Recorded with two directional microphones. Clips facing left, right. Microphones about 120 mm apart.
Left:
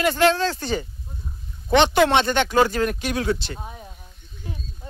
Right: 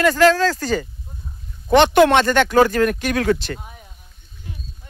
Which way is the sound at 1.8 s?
50° right (ahead or behind).